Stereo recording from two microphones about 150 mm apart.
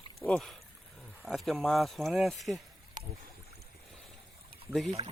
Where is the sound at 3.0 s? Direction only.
65° right (ahead or behind).